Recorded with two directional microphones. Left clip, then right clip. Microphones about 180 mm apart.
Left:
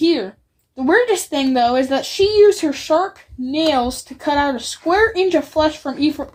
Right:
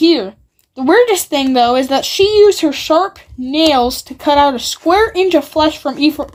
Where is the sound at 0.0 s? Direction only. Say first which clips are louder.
Right 5 dB; 35° right (ahead or behind).